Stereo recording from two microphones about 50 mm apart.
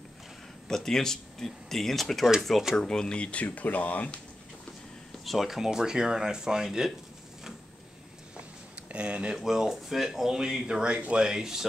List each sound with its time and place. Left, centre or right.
0.7 s speech: centre; by 4.2 s left
5.2 s speech: centre
8.9 s speech: right
9.4 s speech: centre